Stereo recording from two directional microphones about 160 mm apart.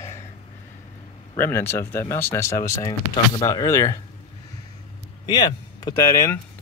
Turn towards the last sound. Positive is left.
turn(degrees=20)  # may be behind; listen again after turning